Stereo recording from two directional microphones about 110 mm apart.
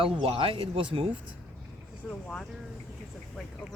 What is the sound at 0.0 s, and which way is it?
Speech, 55° right (ahead or behind).